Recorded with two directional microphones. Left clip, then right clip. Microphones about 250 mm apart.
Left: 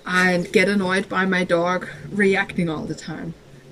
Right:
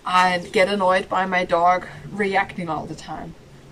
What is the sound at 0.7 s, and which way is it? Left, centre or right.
Speech, right.